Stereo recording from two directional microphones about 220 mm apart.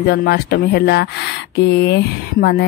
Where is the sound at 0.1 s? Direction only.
45° left (ahead or behind).